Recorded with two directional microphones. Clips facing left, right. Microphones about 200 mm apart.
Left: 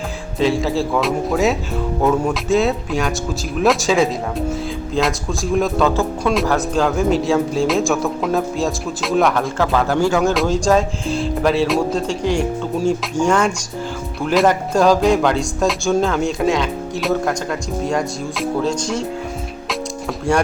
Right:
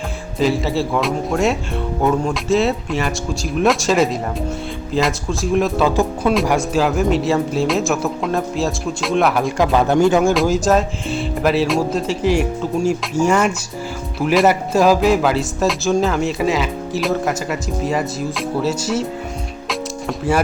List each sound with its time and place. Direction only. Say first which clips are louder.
0.3 s speech: even; centre (ahead or behind)
9.6 s speech: right 4 dB; 20° right (ahead or behind)
10.3 s speech: even; 5° right (ahead or behind)
20.1 s speech: even; 5° right (ahead or behind)